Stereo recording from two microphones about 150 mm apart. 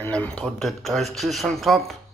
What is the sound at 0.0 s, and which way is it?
Speech, 10° left (ahead or behind).